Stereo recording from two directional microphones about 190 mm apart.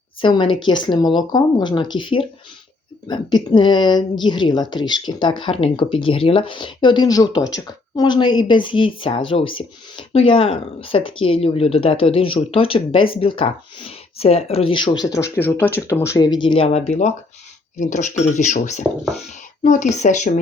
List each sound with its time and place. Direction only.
0.2 s speech: 25° left (ahead or behind)
18.8 s speech: centre (ahead or behind)
19.6 s speech: 40° left (ahead or behind)